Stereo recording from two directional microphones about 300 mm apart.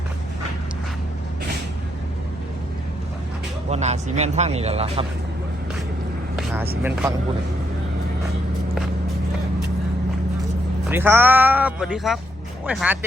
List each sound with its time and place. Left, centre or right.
3.7 s speech: right
6.3 s vehicle: centre
10.8 s speech: centre